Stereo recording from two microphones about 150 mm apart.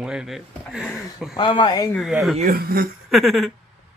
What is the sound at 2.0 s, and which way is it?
Speech, centre (ahead or behind).